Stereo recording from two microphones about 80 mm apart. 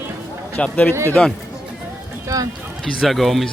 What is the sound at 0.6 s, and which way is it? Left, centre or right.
Speech, left.